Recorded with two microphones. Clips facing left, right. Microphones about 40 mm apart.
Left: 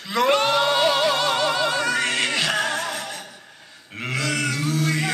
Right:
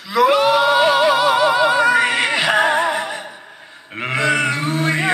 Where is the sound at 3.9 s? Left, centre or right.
Right.